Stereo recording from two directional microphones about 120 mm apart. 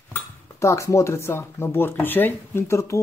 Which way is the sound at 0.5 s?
25° left (ahead or behind).